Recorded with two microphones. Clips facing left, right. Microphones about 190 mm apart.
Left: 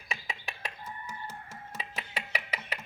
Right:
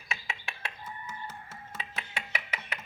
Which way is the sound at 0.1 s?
35° left (ahead or behind).